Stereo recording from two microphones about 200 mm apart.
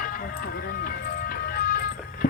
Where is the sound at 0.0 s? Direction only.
45° left (ahead or behind).